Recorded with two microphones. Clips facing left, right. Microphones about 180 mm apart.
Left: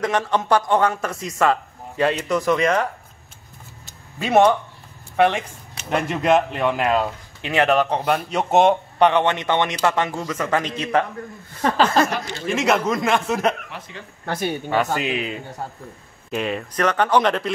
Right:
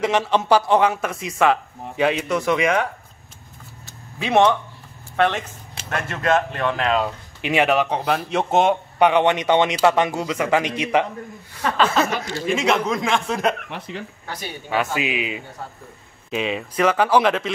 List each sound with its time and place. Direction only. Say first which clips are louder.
0.0 s speech: right 2 dB; 10° right (ahead or behind)
4.2 s speech: left 1 dB; 5° left (ahead or behind)
7.4 s speech: even; 10° right (ahead or behind)
8.0 s speech: even; centre (ahead or behind); by 11.1 s 15° right (ahead or behind)
11.6 s speech: left 2 dB; 35° left (ahead or behind)
12.4 s speech: left 1 dB; 5° left (ahead or behind)
13.7 s speech: right 5 dB; 65° right (ahead or behind)
14.2 s speech: left 8 dB; 55° left (ahead or behind)
14.7 s speech: right 1 dB; 5° right (ahead or behind)